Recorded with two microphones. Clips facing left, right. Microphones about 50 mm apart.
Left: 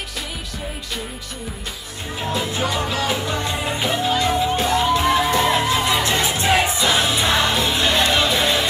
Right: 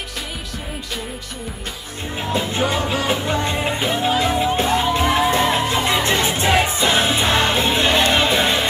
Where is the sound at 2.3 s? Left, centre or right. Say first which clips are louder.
Right 3 dB; right.